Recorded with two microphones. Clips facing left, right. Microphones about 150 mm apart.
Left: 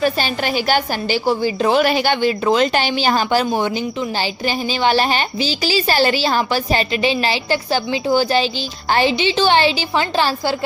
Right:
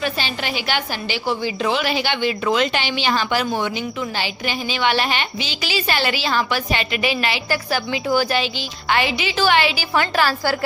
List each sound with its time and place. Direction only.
0.0 s a woman's voice: 45° left (ahead or behind); by 10.5 s 25° left (ahead or behind)